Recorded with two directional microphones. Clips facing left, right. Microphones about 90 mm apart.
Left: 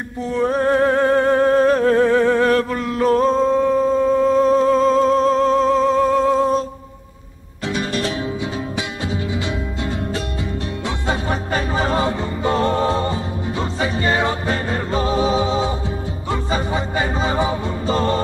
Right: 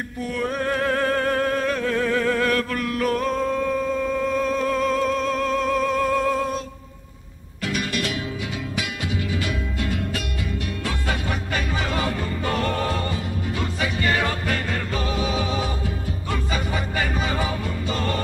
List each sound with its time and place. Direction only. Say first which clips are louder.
0.3 s music: left 8 dB; 30° left (ahead or behind)
7.6 s music: left 4 dB; 30° left (ahead or behind)
9.1 s music: left 3 dB; 25° left (ahead or behind)